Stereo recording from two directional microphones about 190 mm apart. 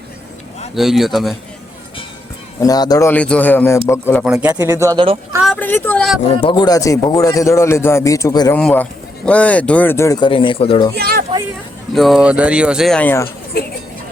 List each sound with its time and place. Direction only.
0.8 s speech: centre (ahead or behind)
2.6 s speech: 20° left (ahead or behind)
3.1 s speech: 5° left (ahead or behind)
4.2 s speech: 5° right (ahead or behind)
4.5 s speech: 15° right (ahead or behind)
5.5 s speech: 10° left (ahead or behind)
6.4 s speech: 25° left (ahead or behind)
8.5 s speech: 5° left (ahead or behind); by 10.9 s 25° left (ahead or behind)
10.9 s speech: 55° right (ahead or behind)
11.9 s speech: centre (ahead or behind)
13.2 s speech: 50° left (ahead or behind)